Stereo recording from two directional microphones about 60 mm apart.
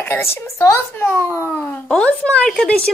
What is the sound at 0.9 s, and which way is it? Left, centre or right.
A woman's voice, left.